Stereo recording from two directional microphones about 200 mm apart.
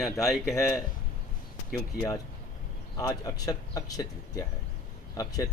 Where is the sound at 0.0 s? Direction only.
Centre (ahead or behind).